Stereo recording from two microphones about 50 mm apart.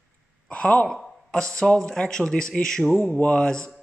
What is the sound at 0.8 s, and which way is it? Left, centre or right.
Speech, centre.